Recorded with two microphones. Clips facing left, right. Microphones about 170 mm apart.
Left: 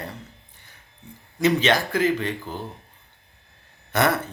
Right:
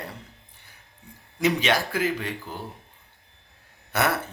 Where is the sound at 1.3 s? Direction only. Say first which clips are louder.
Left 3 dB; 10° right (ahead or behind).